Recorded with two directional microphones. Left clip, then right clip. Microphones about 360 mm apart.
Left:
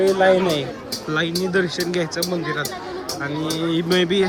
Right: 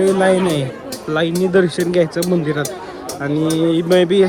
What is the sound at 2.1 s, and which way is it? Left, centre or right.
Speech, right.